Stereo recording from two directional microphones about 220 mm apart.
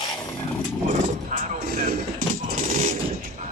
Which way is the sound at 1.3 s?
35° right (ahead or behind).